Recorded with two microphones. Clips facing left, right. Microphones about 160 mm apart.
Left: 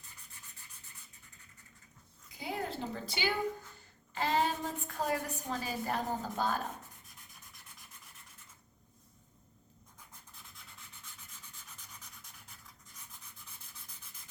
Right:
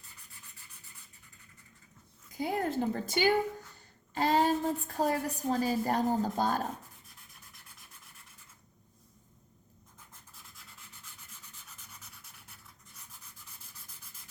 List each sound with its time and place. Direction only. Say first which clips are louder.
2.4 s a woman's voice: right 7 dB; 50° right (ahead or behind)
10.8 s rub: even; 5° right (ahead or behind)